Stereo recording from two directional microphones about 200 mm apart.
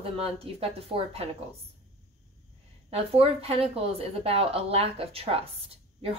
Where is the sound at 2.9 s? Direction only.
30° right (ahead or behind).